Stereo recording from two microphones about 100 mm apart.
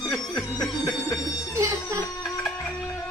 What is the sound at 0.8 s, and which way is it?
Music, 40° left (ahead or behind).